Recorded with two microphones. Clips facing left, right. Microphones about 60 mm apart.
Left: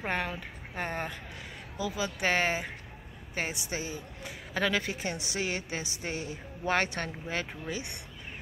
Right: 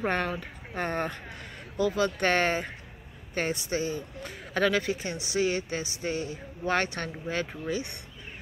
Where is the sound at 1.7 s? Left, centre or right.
Right.